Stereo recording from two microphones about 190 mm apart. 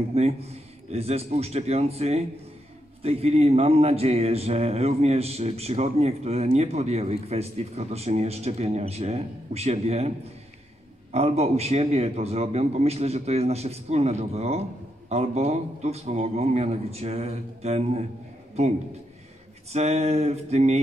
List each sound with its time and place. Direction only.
0.1 s a man's voice: 35° right (ahead or behind)
19.7 s a man's voice: 35° right (ahead or behind)